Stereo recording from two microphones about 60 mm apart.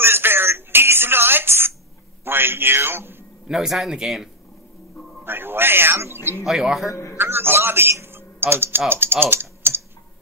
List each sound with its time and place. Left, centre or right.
0.0 s telephone: right
2.2 s a man's voice: right
3.4 s speech: centre
5.2 s a man's voice: right
6.4 s speech: centre
6.9 s a man's voice: left
7.2 s a man's voice: right